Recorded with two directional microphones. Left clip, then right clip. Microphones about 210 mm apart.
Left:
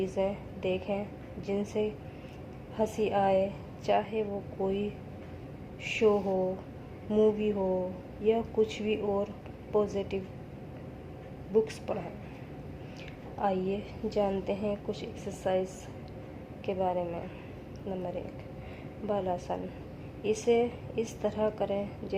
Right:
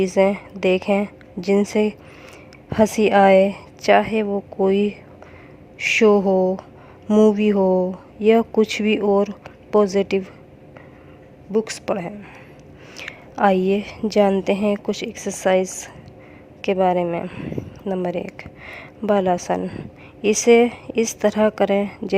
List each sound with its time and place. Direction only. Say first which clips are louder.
0.0 s a woman's voice: right 14 dB; 50° right (ahead or behind)
11.5 s a woman's voice: right 7 dB; 50° right (ahead or behind)